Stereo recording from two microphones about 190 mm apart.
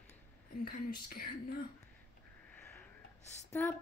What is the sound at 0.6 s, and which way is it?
Speech, 50° left (ahead or behind).